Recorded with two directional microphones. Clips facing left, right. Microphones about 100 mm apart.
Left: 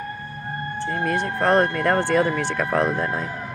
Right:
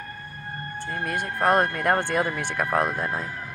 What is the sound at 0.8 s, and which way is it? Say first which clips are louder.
Speech: left 5 dB; 30° left (ahead or behind).